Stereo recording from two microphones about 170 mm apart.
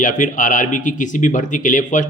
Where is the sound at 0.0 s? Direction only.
50° left (ahead or behind).